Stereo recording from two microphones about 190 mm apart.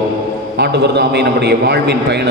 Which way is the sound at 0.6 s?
60° right (ahead or behind).